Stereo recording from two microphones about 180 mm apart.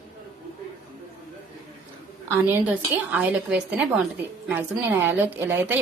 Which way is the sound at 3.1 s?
5° right (ahead or behind).